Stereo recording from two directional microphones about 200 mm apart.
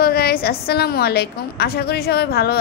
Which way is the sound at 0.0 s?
50° left (ahead or behind).